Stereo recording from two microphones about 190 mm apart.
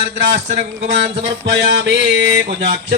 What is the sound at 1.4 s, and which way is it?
Music, 75° right (ahead or behind).